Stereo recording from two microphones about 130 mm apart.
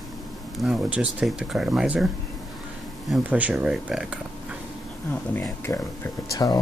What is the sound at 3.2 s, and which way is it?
Speech, 10° right (ahead or behind).